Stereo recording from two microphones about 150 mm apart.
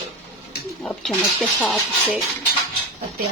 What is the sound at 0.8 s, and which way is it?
Speech, centre (ahead or behind).